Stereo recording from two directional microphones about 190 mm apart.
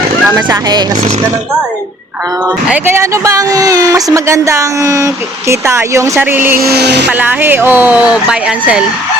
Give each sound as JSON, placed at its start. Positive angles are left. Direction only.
{"t": 0.3, "sound": "speech", "side_deg": -20}
{"t": 2.6, "sound": "speech", "side_deg": -10}
{"t": 6.6, "sound": "speech", "side_deg": -55}
{"t": 7.1, "sound": "speech", "side_deg": -10}